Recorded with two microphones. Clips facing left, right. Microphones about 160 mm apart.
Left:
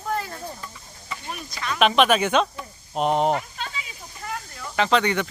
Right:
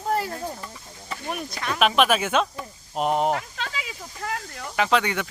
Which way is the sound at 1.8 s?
5° right (ahead or behind).